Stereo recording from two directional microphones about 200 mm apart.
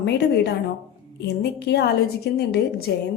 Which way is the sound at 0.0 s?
55° left (ahead or behind).